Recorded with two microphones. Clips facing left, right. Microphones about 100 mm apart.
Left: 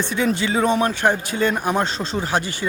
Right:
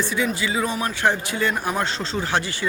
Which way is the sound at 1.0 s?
20° left (ahead or behind).